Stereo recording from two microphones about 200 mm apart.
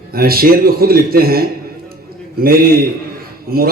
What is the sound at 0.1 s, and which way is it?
Speech, 50° right (ahead or behind).